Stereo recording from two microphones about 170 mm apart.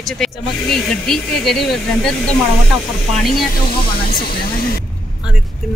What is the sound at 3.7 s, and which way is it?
Speech, 55° left (ahead or behind).